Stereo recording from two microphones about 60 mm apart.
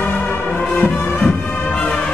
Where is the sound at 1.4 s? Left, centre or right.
Left.